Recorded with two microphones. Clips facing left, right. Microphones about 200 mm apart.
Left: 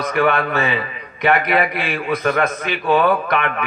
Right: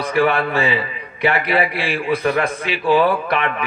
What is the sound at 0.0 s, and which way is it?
A man's voice, 30° right (ahead or behind).